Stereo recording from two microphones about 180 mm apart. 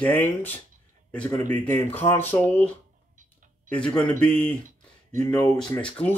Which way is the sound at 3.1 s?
45° right (ahead or behind).